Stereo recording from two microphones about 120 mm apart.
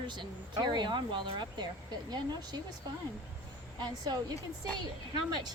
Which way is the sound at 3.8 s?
35° right (ahead or behind).